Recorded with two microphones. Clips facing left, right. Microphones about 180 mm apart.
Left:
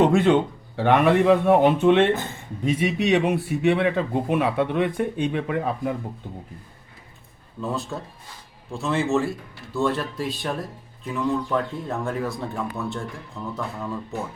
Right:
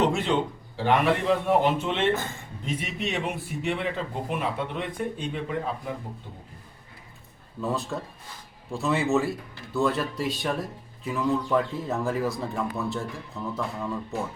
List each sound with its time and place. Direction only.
0.0 s a man's voice: 55° left (ahead or behind)
2.7 s speech: 70° left (ahead or behind)
7.6 s speech: centre (ahead or behind)